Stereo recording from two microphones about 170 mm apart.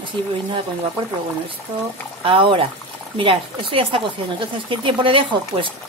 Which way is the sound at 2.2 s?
30° right (ahead or behind).